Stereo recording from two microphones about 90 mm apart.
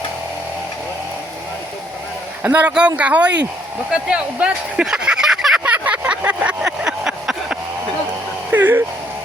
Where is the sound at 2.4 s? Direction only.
15° right (ahead or behind).